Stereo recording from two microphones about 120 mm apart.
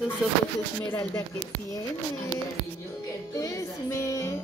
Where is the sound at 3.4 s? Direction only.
25° left (ahead or behind).